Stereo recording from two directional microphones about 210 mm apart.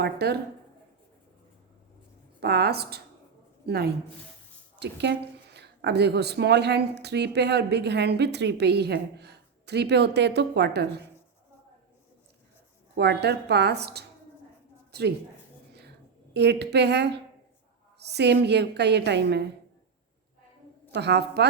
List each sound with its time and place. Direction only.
0.0 s speech: 50° right (ahead or behind)
2.4 s speech: 50° right (ahead or behind)
13.0 s a woman's voice: 50° right (ahead or behind)
16.3 s speech: 55° right (ahead or behind)
20.9 s speech: 55° right (ahead or behind)